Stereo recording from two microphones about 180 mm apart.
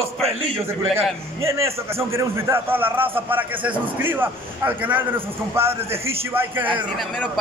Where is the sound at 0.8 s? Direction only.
35° right (ahead or behind).